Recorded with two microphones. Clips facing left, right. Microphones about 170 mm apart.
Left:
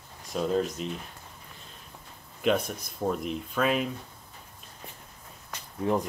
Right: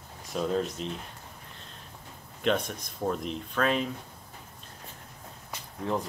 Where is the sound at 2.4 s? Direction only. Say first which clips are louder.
Left 2 dB; 5° left (ahead or behind).